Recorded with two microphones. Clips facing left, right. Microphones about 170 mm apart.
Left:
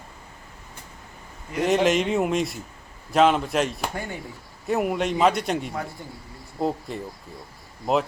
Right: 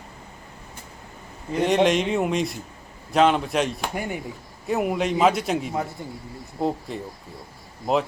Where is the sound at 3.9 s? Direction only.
15° right (ahead or behind).